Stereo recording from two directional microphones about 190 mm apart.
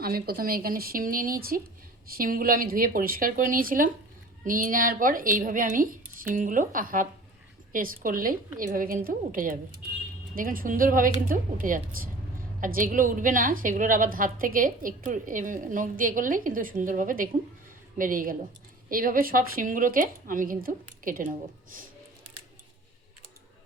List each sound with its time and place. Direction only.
0.0 s a woman's voice: 50° right (ahead or behind)